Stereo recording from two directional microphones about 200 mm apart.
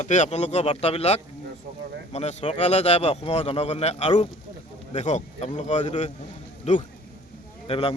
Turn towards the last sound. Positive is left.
turn(degrees=30)  # may be behind; listen again after turning